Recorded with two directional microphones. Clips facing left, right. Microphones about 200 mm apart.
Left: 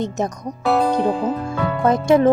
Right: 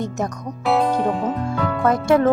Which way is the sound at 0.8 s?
Centre (ahead or behind).